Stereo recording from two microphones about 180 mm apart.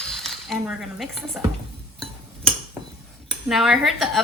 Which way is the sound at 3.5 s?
Centre (ahead or behind).